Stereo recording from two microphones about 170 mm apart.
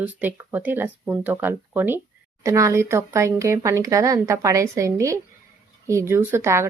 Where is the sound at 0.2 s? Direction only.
10° right (ahead or behind).